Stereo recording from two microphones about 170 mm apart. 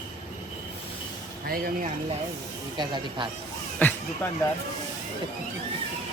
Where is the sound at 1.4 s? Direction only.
60° right (ahead or behind).